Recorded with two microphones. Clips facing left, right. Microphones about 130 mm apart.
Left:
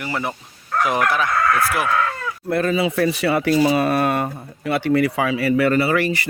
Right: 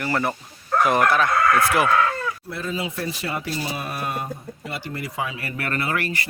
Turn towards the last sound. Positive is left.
turn(degrees=85)